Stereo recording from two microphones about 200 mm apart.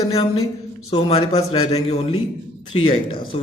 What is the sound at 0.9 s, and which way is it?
A man's voice, 30° left (ahead or behind).